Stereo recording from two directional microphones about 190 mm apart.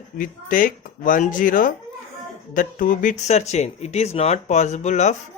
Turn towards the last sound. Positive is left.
turn(degrees=35)  # may be behind; listen again after turning